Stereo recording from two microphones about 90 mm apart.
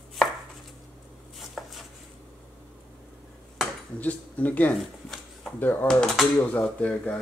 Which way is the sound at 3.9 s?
15° left (ahead or behind).